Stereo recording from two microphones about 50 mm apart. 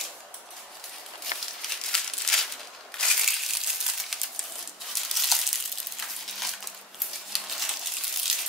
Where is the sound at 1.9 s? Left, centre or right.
Centre.